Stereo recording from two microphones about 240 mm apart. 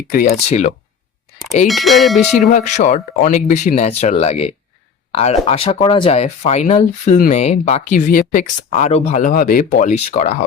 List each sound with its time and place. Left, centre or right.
0.1 s speech: left
1.6 s speech: centre
2.4 s speech: left